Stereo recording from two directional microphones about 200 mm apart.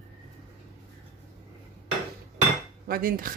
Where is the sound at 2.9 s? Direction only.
45° right (ahead or behind).